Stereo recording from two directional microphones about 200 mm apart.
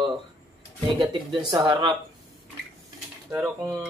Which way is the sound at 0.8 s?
25° right (ahead or behind).